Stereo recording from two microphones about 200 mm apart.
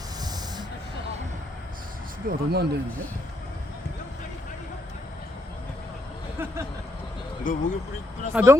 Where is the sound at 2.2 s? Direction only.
50° right (ahead or behind).